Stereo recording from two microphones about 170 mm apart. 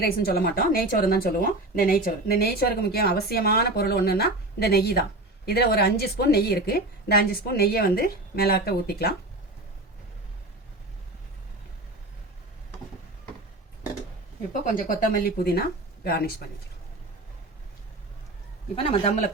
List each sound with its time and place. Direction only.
0.0 s a woman's voice: 65° left (ahead or behind)
14.6 s a woman's voice: 55° left (ahead or behind)
18.8 s a man's voice: 35° left (ahead or behind)